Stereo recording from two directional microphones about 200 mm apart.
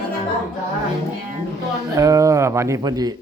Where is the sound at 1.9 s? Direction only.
15° right (ahead or behind).